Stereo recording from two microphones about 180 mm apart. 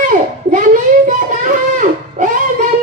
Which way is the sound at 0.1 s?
45° right (ahead or behind).